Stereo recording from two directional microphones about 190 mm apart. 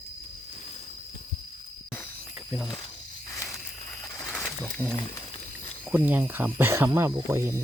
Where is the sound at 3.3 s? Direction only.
15° left (ahead or behind).